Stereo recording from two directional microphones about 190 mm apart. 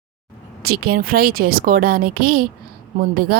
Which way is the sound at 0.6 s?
55° right (ahead or behind).